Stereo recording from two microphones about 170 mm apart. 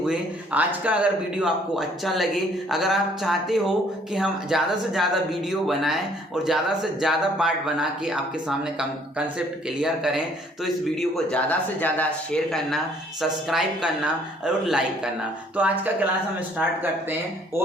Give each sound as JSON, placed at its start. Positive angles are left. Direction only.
{"t": 0.0, "sound": "a man's voice", "side_deg": -5}